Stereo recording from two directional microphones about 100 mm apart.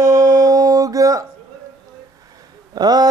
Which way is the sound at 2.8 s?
40° right (ahead or behind).